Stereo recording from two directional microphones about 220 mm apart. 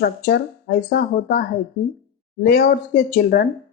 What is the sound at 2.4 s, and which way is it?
Speech, 45° left (ahead or behind).